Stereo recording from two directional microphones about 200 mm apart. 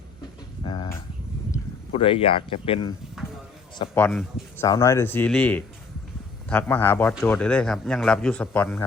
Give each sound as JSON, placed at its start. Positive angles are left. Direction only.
{"t": 0.6, "sound": "a sound", "side_deg": 25}
{"t": 1.9, "sound": "speech", "side_deg": 25}
{"t": 3.9, "sound": "a man's voice", "side_deg": 5}